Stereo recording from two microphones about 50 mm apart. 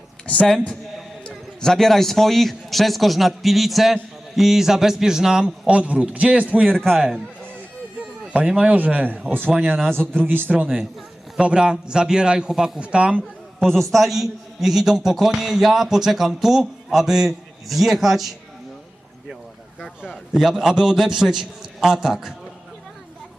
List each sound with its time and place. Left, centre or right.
1.3 s a man's voice: centre; by 6.7 s right
6.7 s a man's voice: centre
8.3 s speech: centre
9.7 s a man's voice: centre
10.2 s a man's voice: right
11.3 s a man's voice: centre
13.6 s a man's voice: centre
20.1 s a man's voice: centre